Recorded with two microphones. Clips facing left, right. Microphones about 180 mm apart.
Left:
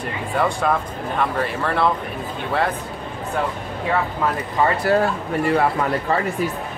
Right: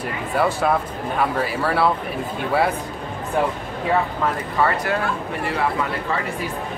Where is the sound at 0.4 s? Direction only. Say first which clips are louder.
Right 1 dB; 5° right (ahead or behind).